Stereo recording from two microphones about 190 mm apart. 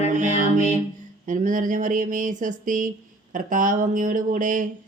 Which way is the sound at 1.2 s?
45° right (ahead or behind).